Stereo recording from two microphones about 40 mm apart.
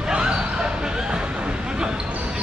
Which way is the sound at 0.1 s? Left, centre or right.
Right.